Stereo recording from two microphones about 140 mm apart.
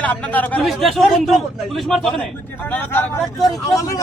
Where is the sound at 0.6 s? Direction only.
Centre (ahead or behind).